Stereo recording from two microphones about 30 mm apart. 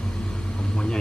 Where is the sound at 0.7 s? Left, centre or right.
Left.